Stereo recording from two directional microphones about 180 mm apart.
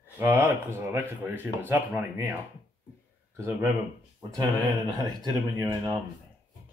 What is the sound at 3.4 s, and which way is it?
Speech, 15° right (ahead or behind).